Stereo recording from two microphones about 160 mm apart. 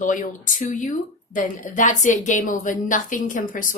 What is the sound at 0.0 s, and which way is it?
Speech, 55° left (ahead or behind).